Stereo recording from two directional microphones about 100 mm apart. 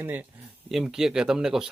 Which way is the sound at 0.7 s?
5° right (ahead or behind).